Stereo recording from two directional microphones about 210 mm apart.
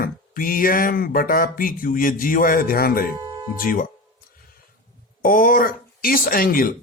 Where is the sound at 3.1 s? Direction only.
20° right (ahead or behind).